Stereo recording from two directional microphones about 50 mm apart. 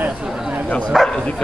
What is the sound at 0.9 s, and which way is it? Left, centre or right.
Bow-wow, centre.